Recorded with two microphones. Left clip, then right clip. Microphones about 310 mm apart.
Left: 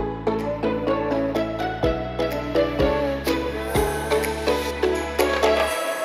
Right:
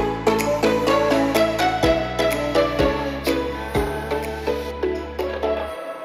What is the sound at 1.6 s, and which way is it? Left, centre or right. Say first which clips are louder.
Music: right 5 dB; centre.